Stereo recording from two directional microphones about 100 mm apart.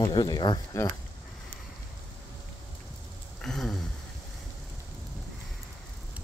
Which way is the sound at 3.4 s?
5° left (ahead or behind).